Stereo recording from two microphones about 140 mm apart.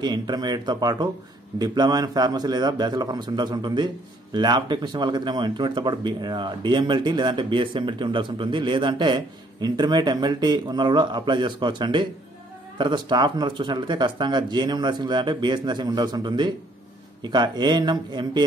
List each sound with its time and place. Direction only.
0.0 s a man's voice: 30° right (ahead or behind)